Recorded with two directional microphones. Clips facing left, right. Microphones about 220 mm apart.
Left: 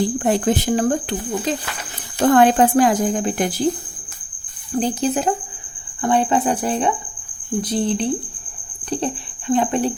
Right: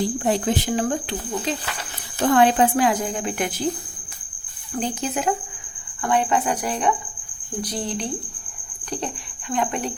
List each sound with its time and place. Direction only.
0.2 s speech: 55° left (ahead or behind)
2.1 s speech: 45° left (ahead or behind)
4.7 s speech: 35° left (ahead or behind)
9.5 s speech: 30° left (ahead or behind)